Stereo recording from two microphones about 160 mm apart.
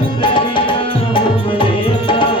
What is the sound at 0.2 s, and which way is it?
Music, 30° left (ahead or behind).